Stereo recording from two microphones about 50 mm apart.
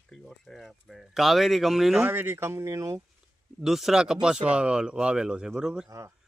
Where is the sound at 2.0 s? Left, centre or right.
Right.